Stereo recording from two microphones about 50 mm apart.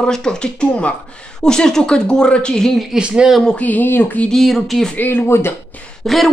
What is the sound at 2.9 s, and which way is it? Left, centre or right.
Speech, centre.